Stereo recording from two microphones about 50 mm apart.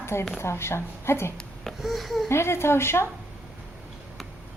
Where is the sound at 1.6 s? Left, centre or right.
Centre.